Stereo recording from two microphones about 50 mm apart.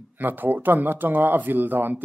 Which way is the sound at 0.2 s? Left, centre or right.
Right.